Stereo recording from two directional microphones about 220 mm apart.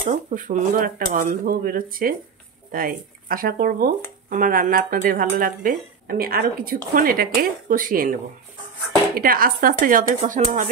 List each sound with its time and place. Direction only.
0.0 s speech: 35° right (ahead or behind)